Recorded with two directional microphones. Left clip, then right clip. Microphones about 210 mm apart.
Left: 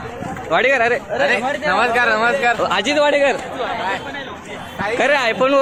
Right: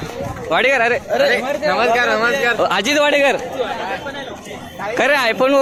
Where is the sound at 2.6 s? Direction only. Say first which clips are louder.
Right 1 dB; 15° right (ahead or behind).